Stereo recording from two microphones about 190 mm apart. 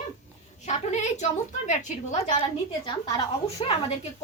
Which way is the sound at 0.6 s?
35° left (ahead or behind).